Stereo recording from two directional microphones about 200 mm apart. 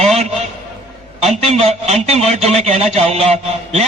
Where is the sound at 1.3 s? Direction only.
30° right (ahead or behind).